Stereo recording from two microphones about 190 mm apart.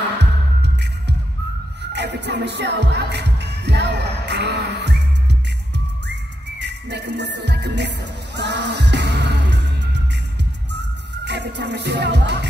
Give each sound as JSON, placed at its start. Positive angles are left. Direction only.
{"t": 0.2, "sound": "music", "side_deg": -60}
{"t": 6.6, "sound": "music", "side_deg": -65}
{"t": 11.2, "sound": "music", "side_deg": -65}